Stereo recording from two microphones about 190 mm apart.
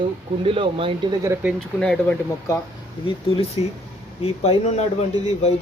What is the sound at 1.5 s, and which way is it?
Speech, 5° left (ahead or behind).